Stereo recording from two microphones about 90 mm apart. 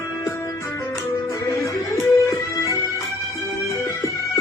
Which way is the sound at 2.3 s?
35° left (ahead or behind).